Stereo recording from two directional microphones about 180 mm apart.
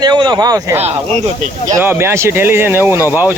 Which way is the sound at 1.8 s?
10° right (ahead or behind).